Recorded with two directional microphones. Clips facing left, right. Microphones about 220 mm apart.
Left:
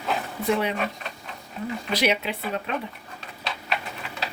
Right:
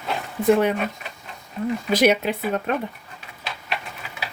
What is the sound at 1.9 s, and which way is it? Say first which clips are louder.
Speech: right 6 dB; 45° right (ahead or behind).